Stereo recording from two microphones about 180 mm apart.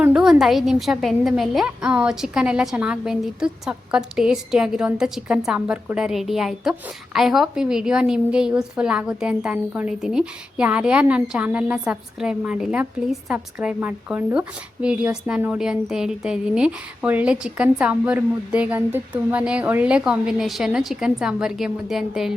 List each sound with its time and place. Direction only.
0.0 s a woman's voice: 5° right (ahead or behind)